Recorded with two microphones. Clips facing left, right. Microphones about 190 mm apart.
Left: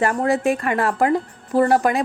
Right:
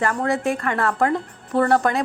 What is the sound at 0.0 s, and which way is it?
Speech, 20° left (ahead or behind).